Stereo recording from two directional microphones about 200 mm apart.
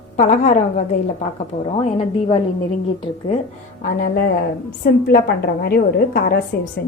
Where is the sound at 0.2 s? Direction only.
40° left (ahead or behind).